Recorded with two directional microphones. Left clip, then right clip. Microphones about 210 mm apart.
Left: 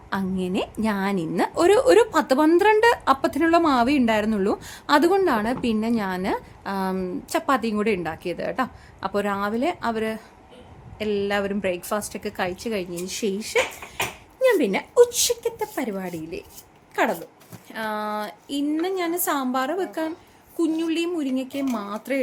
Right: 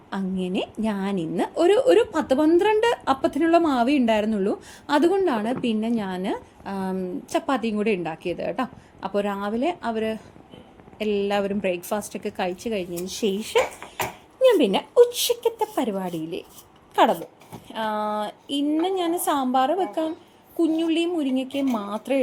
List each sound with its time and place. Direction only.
0.1 s a woman's voice: 10° left (ahead or behind)
14.4 s a woman's voice: centre (ahead or behind)